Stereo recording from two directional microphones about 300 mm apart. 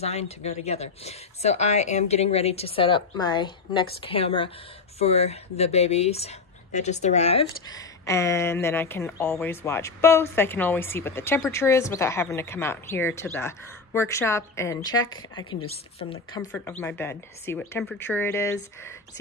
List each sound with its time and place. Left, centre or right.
0.0 s a woman's voice: left
16.8 s speech: centre